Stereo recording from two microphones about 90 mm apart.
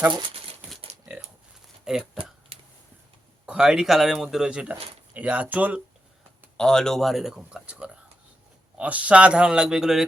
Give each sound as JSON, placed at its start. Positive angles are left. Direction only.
{"t": 1.8, "sound": "speech", "side_deg": -5}
{"t": 2.5, "sound": "a sound", "side_deg": -90}
{"t": 3.4, "sound": "speech", "side_deg": -10}
{"t": 6.6, "sound": "speech", "side_deg": 5}